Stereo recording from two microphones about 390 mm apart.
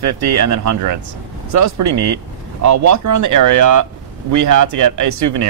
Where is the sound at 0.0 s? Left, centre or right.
Right.